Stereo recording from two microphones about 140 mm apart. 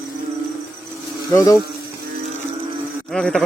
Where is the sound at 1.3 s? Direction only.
25° left (ahead or behind).